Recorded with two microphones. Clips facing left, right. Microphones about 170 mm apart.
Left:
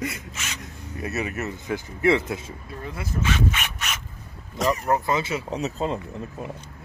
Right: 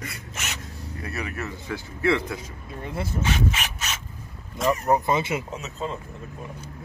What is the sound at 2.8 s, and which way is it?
Speech, 25° right (ahead or behind).